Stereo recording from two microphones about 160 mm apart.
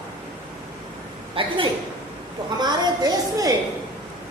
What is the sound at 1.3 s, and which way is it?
A woman's voice, 30° right (ahead or behind).